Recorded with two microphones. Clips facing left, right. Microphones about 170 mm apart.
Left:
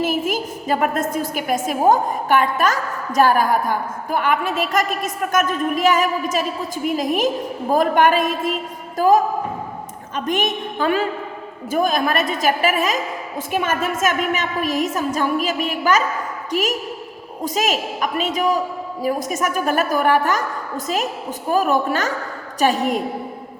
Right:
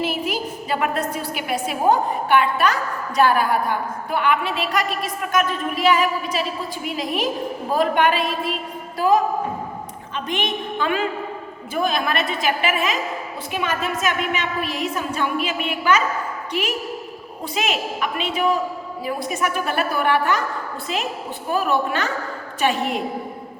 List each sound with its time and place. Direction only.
0.0 s a woman's voice: 45° left (ahead or behind)